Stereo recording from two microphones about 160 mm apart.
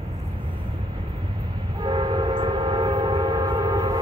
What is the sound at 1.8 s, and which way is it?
Train, 30° right (ahead or behind).